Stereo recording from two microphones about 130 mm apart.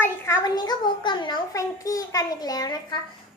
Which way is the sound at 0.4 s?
30° left (ahead or behind).